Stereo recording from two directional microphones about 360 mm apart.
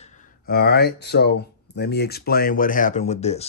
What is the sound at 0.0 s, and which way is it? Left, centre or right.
Mantra, centre.